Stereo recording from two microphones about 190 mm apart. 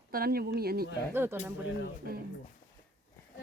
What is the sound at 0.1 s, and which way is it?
Speech, 50° right (ahead or behind).